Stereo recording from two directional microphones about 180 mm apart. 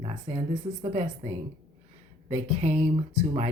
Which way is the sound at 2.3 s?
40° right (ahead or behind).